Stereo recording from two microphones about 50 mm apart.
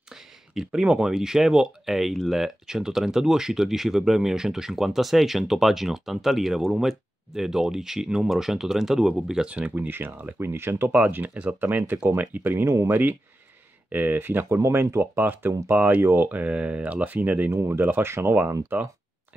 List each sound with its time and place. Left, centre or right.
0.7 s speech: centre
9.5 s speech: right
9.8 s speech: right
10.4 s speech: right
10.9 s speech: right
12.6 s speech: right
13.8 s speech: right
14.5 s speech: right
15.0 s speech: right
15.7 s speech: right
16.0 s speech: right
17.5 s speech: right
17.7 s speech: right
18.7 s speech: right